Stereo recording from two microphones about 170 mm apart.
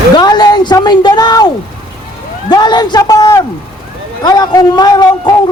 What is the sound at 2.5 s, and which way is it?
A man's voice, 25° left (ahead or behind).